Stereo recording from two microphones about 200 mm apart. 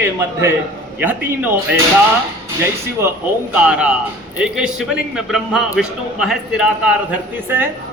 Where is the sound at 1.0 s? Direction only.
10° right (ahead or behind).